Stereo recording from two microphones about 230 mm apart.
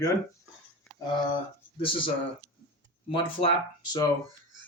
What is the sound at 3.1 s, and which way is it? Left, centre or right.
Speech, left.